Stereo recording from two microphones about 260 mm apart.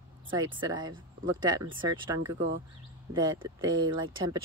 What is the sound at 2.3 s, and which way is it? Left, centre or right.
Speech, right.